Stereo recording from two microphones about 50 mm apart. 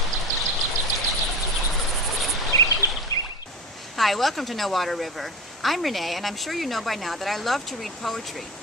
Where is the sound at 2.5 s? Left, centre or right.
Left.